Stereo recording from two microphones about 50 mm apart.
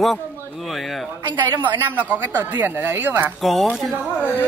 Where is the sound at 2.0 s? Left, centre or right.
Right.